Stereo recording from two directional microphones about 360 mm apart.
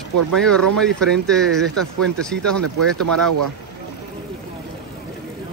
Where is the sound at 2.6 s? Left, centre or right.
Right.